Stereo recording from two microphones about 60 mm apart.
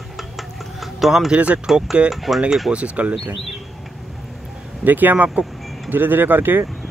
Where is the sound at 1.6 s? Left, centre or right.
Centre.